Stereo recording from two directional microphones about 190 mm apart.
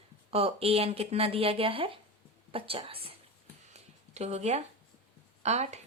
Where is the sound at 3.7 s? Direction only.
35° right (ahead or behind).